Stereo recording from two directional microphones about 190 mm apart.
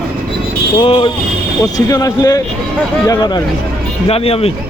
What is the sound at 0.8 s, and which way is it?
Speech, 30° left (ahead or behind).